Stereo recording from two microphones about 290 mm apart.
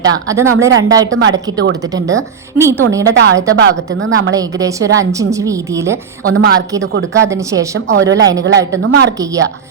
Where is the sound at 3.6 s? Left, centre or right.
Right.